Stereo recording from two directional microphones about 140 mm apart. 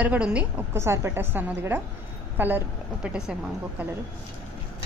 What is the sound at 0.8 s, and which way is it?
A woman's voice, 20° right (ahead or behind).